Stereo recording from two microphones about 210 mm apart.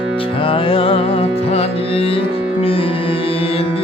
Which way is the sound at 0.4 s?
25° left (ahead or behind).